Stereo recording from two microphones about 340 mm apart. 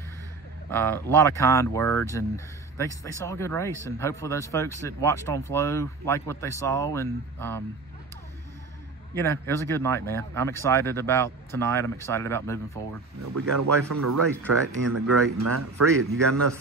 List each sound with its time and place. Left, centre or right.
0.7 s speech: centre
9.1 s speech: centre
13.2 s speech: right